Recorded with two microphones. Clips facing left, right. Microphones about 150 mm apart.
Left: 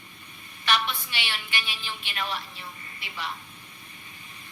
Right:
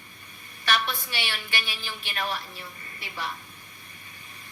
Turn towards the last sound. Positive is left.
turn(degrees=-45)  # may be behind; listen again after turning